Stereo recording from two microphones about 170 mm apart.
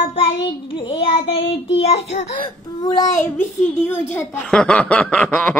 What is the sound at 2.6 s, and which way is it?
Speech, 20° left (ahead or behind).